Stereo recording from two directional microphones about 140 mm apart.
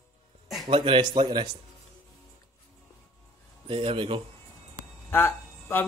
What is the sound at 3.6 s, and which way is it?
Speech, 40° right (ahead or behind).